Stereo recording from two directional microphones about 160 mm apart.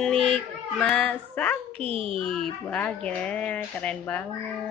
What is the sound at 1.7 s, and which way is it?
Speech, 35° right (ahead or behind).